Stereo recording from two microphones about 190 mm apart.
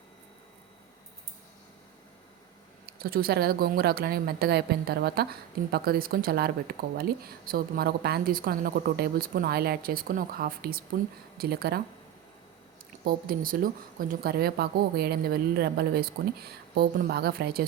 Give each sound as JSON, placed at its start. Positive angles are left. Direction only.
{"t": 2.8, "sound": "speech", "side_deg": -50}
{"t": 13.1, "sound": "speech", "side_deg": -50}